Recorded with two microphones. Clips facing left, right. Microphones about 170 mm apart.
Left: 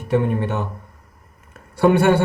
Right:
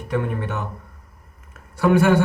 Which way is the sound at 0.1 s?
25° left (ahead or behind).